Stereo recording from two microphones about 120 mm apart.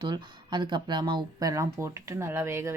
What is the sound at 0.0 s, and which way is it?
Speech, 40° right (ahead or behind).